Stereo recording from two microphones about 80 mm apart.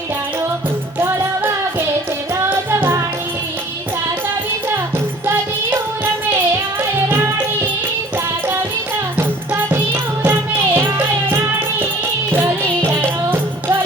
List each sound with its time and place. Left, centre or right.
0.9 s music: right
5.2 s music: right
7.1 s music: right
9.1 s music: right